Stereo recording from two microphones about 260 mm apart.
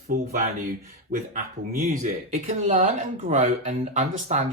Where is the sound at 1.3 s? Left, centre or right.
Right.